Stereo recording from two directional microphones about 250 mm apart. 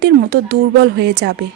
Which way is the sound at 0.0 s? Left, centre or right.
Right.